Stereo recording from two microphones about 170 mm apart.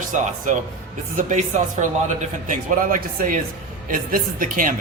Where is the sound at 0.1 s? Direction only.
50° right (ahead or behind).